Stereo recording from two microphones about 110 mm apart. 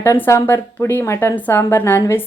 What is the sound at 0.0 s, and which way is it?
A woman's voice, 25° left (ahead or behind).